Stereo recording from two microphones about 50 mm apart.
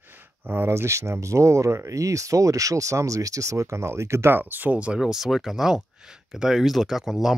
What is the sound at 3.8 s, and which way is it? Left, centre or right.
Speech, right.